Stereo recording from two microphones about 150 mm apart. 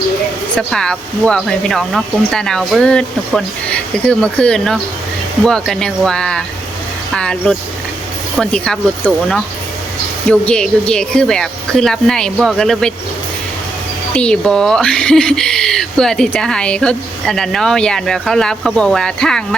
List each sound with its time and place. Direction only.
0.5 s speech: 5° left (ahead or behind)
14.2 s speech: 5° left (ahead or behind)